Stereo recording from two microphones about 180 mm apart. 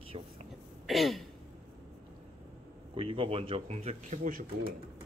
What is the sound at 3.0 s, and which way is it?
Speech, 30° right (ahead or behind).